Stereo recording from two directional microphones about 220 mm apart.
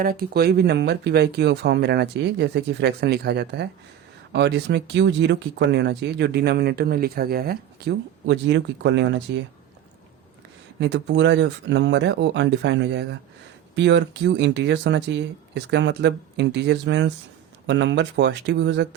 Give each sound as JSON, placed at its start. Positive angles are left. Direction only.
{"t": 0.0, "sound": "speech", "side_deg": -40}
{"t": 10.8, "sound": "speech", "side_deg": -55}